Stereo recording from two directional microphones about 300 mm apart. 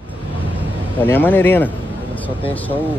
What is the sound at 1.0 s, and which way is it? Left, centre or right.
Speech, centre.